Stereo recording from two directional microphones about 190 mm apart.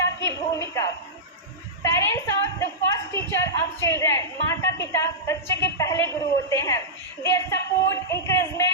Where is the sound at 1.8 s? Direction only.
15° left (ahead or behind).